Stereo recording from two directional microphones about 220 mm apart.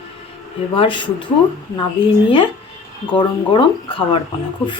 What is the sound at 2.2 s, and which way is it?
Speech, 25° left (ahead or behind).